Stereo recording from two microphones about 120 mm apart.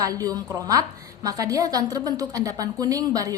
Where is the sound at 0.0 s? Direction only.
30° right (ahead or behind).